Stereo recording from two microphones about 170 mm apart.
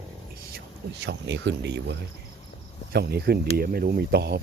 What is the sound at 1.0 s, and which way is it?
Speech, 90° right.